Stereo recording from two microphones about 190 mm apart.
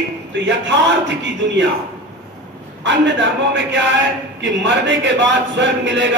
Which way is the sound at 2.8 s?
70° right (ahead or behind).